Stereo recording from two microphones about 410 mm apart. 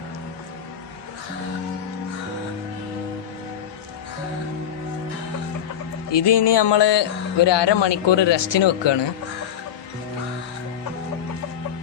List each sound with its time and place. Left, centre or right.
6.1 s speech: left